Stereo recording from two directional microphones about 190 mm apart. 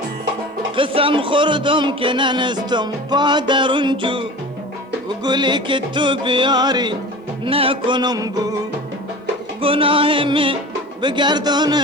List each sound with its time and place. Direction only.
0.8 s speech: 30° right (ahead or behind)
9.6 s speech: 30° right (ahead or behind)